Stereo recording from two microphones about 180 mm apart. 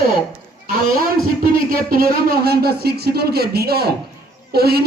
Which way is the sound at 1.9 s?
55° right (ahead or behind).